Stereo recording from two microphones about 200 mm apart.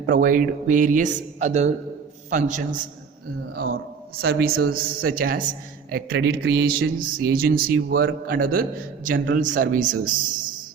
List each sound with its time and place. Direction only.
0.1 s speech: 45° right (ahead or behind)
3.5 s a sound: 50° right (ahead or behind)
4.3 s a man's voice: 50° right (ahead or behind)